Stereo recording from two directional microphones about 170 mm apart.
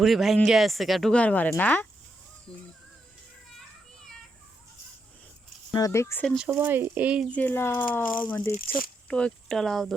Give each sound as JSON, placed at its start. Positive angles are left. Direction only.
{"t": 0.0, "sound": "speech", "side_deg": 0}
{"t": 5.7, "sound": "speech", "side_deg": 20}
{"t": 6.5, "sound": "speech", "side_deg": -10}
{"t": 7.3, "sound": "speech", "side_deg": 10}